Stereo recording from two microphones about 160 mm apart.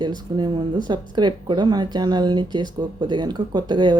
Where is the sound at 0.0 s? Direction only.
25° right (ahead or behind).